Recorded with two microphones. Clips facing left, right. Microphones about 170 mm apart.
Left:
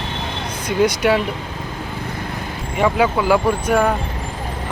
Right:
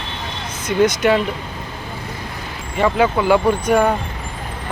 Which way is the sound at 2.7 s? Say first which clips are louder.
Right 1 dB; 5° left (ahead or behind).